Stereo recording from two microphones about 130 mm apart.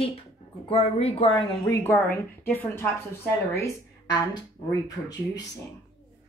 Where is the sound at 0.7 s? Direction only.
50° left (ahead or behind).